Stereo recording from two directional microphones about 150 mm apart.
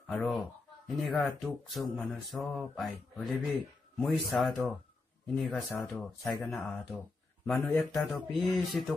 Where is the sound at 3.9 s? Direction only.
Centre (ahead or behind).